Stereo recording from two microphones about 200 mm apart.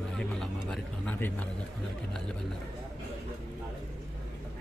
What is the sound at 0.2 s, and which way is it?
Vehicle, 5° left (ahead or behind).